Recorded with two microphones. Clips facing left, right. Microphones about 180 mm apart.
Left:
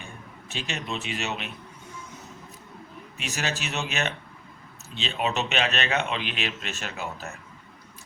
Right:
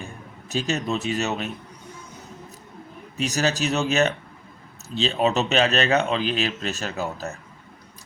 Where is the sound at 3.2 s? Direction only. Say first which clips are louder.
Right 8 dB; 40° right (ahead or behind).